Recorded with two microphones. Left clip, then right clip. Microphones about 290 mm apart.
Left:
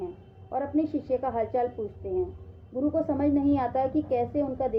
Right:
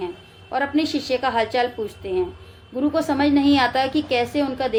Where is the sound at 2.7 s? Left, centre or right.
Right.